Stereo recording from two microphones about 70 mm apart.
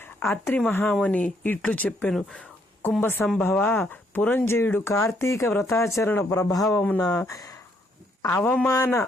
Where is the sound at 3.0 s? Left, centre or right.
Left.